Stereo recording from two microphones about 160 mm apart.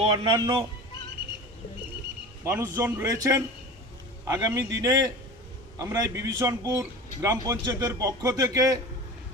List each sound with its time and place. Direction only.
0.0 s a man's voice: 40° right (ahead or behind)
0.3 s a man's voice: 25° right (ahead or behind)
2.4 s a man's voice: 15° right (ahead or behind)